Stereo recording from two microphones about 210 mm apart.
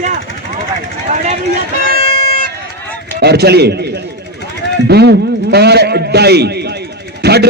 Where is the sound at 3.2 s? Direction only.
50° right (ahead or behind).